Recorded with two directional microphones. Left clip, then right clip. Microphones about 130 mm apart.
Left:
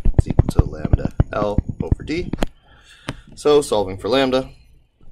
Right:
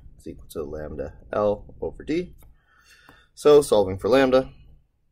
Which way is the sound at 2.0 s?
Centre (ahead or behind).